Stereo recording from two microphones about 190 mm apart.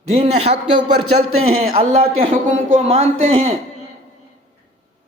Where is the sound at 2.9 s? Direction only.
35° right (ahead or behind).